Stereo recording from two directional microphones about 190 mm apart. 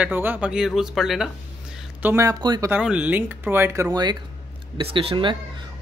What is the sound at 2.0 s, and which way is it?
Speech, 15° right (ahead or behind).